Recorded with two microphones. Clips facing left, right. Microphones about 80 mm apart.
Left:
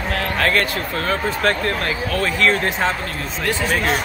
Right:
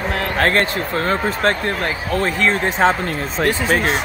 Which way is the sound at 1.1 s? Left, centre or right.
Right.